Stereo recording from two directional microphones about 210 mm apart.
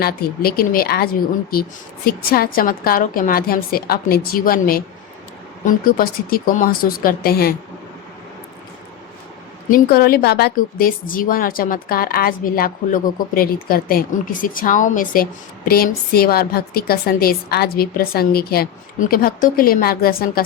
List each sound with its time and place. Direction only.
0.0 s a woman's voice: 45° left (ahead or behind)
9.7 s a woman's voice: 45° left (ahead or behind)